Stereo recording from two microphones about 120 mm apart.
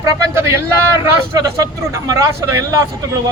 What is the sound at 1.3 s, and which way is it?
A man's voice, 30° right (ahead or behind).